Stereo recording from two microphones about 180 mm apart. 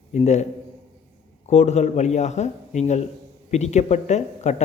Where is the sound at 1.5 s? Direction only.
40° left (ahead or behind).